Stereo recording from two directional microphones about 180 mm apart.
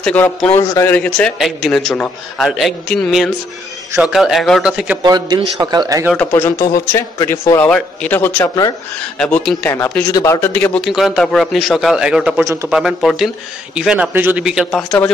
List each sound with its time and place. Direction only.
0.0 s a man's voice: 5° left (ahead or behind)
5.0 s a man's voice: 20° right (ahead or behind)
6.1 s a man's voice: 15° left (ahead or behind)